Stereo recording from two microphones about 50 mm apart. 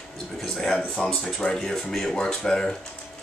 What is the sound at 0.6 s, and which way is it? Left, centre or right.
Speech, centre.